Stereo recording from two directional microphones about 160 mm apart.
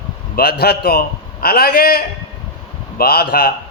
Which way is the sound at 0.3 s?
85° left.